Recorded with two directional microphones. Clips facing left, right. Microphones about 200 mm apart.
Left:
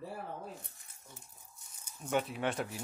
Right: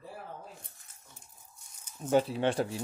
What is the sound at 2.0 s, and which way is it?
Speech, 35° right (ahead or behind).